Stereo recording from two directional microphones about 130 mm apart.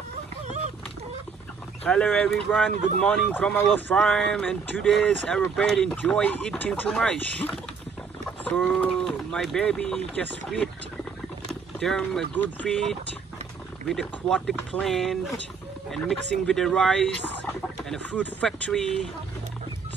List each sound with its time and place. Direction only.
1.9 s speech: 10° left (ahead or behind)
8.5 s speech: 5° left (ahead or behind)
11.8 s speech: 5° left (ahead or behind)